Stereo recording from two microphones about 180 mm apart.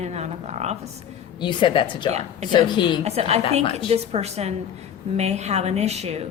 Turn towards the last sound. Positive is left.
turn(degrees=-35)  # may be behind; listen again after turning